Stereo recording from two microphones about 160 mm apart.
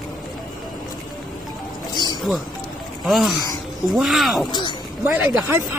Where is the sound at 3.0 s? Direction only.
Centre (ahead or behind).